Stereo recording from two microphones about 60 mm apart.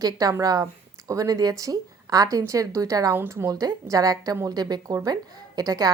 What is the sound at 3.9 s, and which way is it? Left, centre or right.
A woman's voice, right.